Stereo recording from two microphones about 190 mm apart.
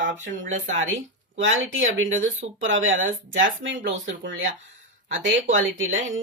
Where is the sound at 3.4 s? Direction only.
75° right (ahead or behind).